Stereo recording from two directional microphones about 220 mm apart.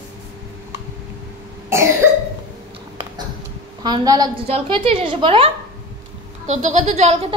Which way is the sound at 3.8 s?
15° right (ahead or behind).